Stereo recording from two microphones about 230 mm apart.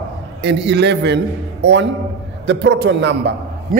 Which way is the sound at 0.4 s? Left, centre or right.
Right.